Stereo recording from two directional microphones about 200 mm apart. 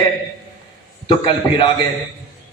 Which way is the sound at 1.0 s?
25° left (ahead or behind).